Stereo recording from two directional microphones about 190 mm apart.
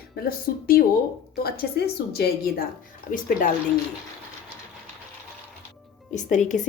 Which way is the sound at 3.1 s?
45° left (ahead or behind).